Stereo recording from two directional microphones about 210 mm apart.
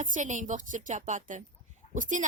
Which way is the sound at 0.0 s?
35° right (ahead or behind).